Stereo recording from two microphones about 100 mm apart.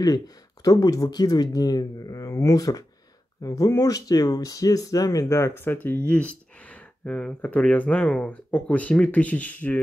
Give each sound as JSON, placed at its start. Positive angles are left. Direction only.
{"t": 0.7, "sound": "speech", "side_deg": 40}